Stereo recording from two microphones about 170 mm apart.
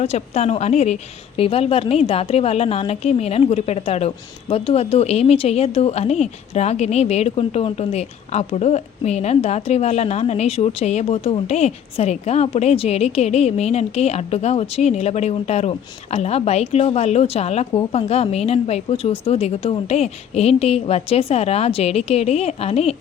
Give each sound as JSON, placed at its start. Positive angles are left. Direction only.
{"t": 0.0, "sound": "a woman's voice", "side_deg": 40}